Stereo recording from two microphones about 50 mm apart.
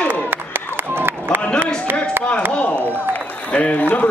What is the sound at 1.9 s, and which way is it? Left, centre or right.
Chop, right.